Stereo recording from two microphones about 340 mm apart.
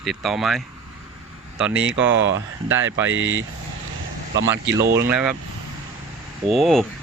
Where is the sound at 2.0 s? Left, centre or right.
Right.